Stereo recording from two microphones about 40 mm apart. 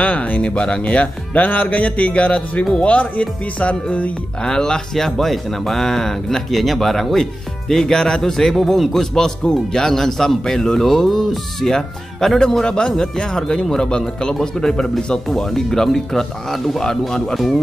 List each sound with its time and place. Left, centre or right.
0.0 s speech: left
4.5 s speech: centre
15.2 s speech: centre